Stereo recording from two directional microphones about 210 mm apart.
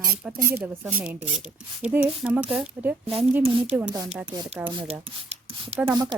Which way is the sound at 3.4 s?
25° right (ahead or behind).